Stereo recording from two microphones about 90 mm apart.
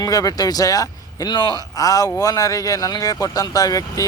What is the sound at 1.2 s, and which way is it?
Speech, 60° left (ahead or behind).